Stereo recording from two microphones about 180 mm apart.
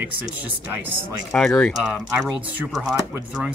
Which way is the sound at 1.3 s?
5° left (ahead or behind).